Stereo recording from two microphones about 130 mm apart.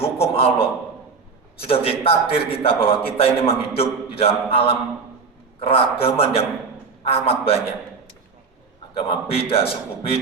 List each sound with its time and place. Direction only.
0.0 s a sound: 50° left (ahead or behind)
1.5 s a man's voice: 45° left (ahead or behind)
9.0 s a man's voice: 45° left (ahead or behind)